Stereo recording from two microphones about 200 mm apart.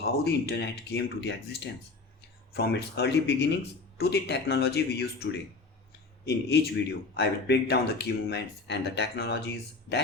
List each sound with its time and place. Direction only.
0.0 s speech: 55° left (ahead or behind)
6.2 s a man's voice: 55° left (ahead or behind)